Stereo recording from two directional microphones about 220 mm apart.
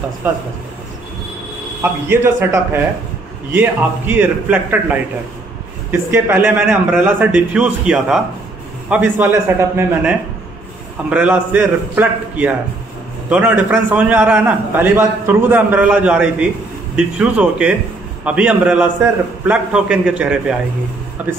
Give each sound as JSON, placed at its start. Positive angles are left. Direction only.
{"t": 0.2, "sound": "a man's voice", "side_deg": -10}
{"t": 1.8, "sound": "a man's voice", "side_deg": -10}
{"t": 5.9, "sound": "a man's voice", "side_deg": -10}
{"t": 11.1, "sound": "a man's voice", "side_deg": -5}